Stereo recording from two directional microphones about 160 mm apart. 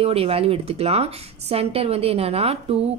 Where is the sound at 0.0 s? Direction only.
40° right (ahead or behind).